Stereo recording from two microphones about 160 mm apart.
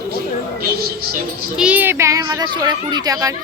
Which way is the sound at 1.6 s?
10° right (ahead or behind).